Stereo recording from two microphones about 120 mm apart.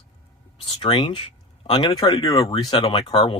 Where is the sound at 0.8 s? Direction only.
50° left (ahead or behind).